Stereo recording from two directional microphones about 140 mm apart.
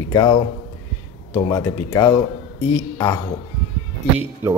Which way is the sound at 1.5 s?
25° left (ahead or behind).